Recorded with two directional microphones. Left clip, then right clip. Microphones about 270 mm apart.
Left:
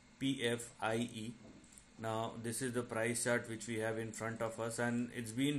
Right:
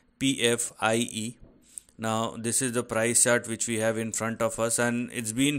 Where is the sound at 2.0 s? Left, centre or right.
Right.